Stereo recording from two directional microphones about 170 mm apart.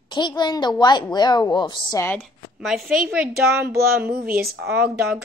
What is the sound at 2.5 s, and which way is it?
Speech, centre (ahead or behind).